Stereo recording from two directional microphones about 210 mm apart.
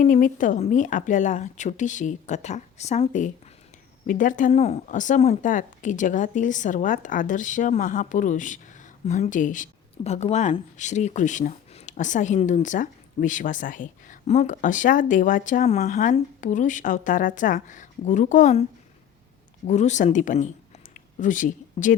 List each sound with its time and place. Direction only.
0.0 s speech: 40° left (ahead or behind)
19.6 s speech: 35° left (ahead or behind)